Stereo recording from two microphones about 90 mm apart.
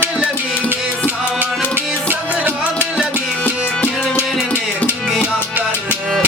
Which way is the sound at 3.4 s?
20° left (ahead or behind).